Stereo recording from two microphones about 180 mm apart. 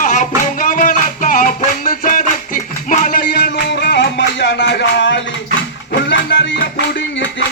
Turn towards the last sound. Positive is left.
turn(degrees=75)  # may be behind; listen again after turning